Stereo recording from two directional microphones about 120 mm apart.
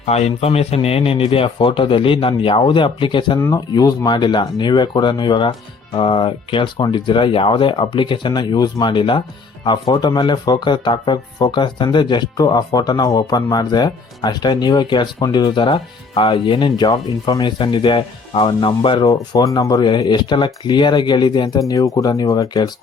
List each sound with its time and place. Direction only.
0.0 s a man's voice: 65° left (ahead or behind); by 19.0 s 50° left (ahead or behind)
19.0 s speech: 30° left (ahead or behind)
19.9 s speech: 40° left (ahead or behind)